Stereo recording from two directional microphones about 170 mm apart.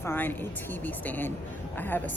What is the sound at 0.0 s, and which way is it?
Speech, 15° left (ahead or behind).